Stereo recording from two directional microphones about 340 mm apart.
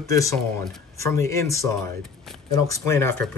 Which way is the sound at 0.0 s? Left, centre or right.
Centre.